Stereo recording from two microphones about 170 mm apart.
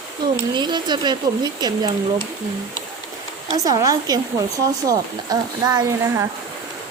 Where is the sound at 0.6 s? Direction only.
25° right (ahead or behind).